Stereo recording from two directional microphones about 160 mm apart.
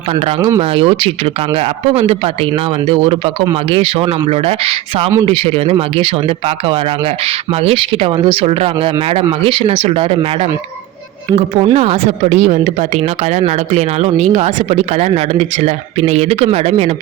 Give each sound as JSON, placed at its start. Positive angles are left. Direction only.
{"t": 0.3, "sound": "speech", "side_deg": -20}
{"t": 0.6, "sound": "speech", "side_deg": -35}
{"t": 11.6, "sound": "speech", "side_deg": -40}